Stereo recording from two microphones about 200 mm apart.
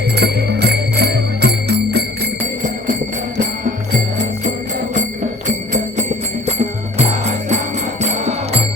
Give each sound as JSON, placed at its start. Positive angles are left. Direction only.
{"t": 0.2, "sound": "music", "side_deg": -55}
{"t": 7.0, "sound": "music", "side_deg": -35}